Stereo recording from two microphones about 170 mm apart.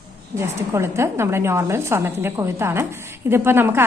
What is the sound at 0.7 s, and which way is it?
A woman's voice, 15° right (ahead or behind).